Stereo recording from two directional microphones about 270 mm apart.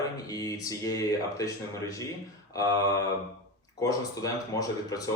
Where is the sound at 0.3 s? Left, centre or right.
Centre.